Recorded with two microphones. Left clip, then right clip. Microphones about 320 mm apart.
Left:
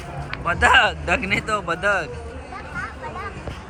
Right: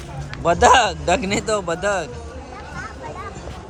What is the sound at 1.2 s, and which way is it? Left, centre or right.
Speech, right.